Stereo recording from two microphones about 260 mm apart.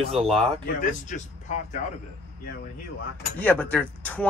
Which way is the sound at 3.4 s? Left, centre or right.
Centre.